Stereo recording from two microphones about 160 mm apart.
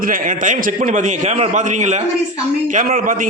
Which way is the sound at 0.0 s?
60° right (ahead or behind).